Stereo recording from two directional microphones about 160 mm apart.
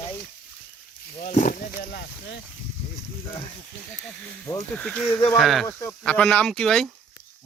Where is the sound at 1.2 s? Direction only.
55° left (ahead or behind); by 2.3 s 85° left.